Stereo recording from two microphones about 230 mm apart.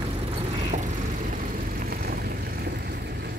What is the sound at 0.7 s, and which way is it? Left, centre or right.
Vehicle, right.